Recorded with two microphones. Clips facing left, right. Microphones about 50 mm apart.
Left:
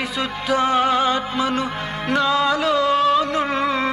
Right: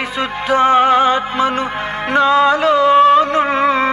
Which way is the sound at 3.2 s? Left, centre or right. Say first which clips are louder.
Right 6 dB; right.